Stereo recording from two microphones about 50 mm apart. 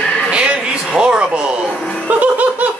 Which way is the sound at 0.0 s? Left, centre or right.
Left.